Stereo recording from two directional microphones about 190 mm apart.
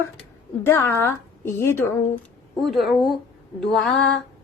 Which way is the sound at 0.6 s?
10° left (ahead or behind).